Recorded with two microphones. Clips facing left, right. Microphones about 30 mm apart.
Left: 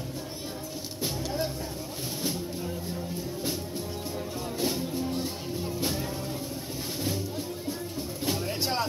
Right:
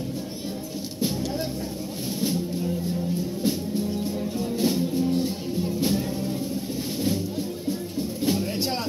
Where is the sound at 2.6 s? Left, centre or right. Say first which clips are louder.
Right 7 dB; centre.